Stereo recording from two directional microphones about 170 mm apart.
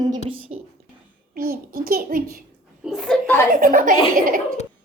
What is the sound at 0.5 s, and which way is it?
Speech, 40° right (ahead or behind).